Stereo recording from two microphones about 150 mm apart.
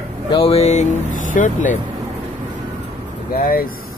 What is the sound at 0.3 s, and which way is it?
Speech, 40° left (ahead or behind).